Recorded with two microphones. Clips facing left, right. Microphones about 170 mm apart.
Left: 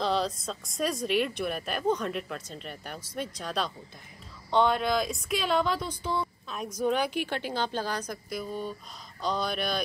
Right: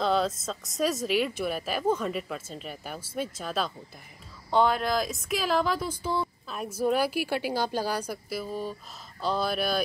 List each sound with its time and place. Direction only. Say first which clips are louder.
0.0 s speech: right 2 dB; centre (ahead or behind)